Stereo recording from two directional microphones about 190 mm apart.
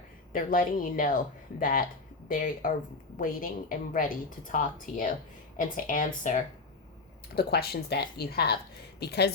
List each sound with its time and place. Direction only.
0.3 s a woman's voice: 45° left (ahead or behind)
7.3 s speech: 55° left (ahead or behind)